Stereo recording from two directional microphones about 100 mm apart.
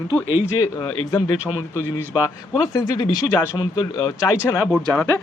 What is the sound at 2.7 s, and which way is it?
Speech, 40° left (ahead or behind).